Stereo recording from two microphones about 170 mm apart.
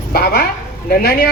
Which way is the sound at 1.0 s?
60° left (ahead or behind).